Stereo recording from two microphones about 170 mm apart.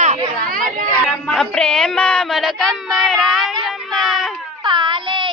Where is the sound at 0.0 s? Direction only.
45° right (ahead or behind).